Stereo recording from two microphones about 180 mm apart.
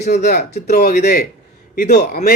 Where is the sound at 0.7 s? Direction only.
60° left (ahead or behind).